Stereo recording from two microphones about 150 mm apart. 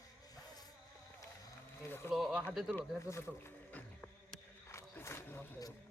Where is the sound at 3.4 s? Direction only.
10° left (ahead or behind).